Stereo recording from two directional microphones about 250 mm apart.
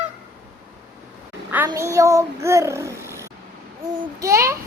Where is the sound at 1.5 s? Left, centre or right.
Centre.